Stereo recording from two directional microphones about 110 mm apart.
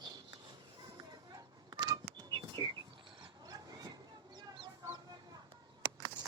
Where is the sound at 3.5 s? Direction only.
35° right (ahead or behind).